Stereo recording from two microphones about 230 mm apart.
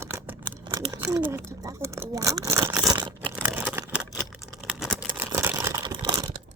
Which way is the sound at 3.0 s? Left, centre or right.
Centre.